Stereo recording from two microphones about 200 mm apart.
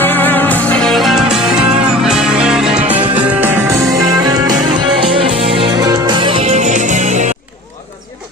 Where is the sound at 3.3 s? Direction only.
10° right (ahead or behind); by 7.3 s 35° right (ahead or behind).